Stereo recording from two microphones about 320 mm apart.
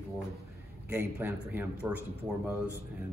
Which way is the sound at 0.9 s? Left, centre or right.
Centre.